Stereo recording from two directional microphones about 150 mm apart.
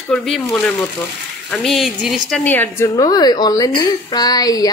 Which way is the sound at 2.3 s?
10° left (ahead or behind).